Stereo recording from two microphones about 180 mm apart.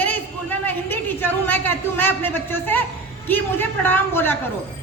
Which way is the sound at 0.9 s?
10° left (ahead or behind).